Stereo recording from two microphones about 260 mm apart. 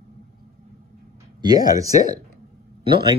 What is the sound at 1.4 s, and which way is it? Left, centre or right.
Speech, centre.